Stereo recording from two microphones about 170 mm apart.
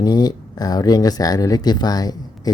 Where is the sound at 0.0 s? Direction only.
25° left (ahead or behind).